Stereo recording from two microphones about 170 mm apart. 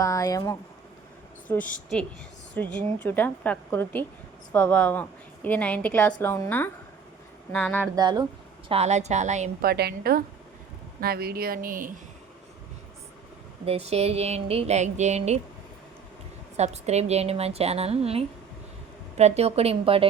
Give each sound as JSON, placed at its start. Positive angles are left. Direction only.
{"t": 0.0, "sound": "speech", "side_deg": 20}
{"t": 1.5, "sound": "a woman's voice", "side_deg": 5}
{"t": 7.5, "sound": "a woman's voice", "side_deg": 10}
{"t": 7.9, "sound": "speech", "side_deg": -25}
{"t": 8.7, "sound": "speech", "side_deg": -40}
{"t": 9.6, "sound": "speech", "side_deg": -65}
{"t": 13.7, "sound": "speech", "side_deg": -40}
{"t": 16.6, "sound": "speech", "side_deg": -40}